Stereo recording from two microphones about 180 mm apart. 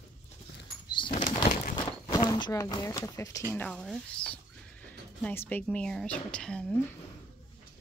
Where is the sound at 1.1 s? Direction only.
45° left (ahead or behind).